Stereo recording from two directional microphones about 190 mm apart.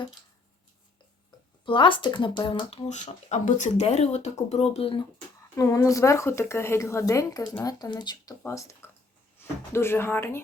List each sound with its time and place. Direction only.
1.6 s speech: 25° left (ahead or behind)
5.5 s speech: 15° left (ahead or behind)